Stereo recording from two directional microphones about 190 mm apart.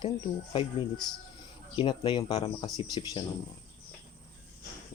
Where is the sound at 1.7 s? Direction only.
25° left (ahead or behind).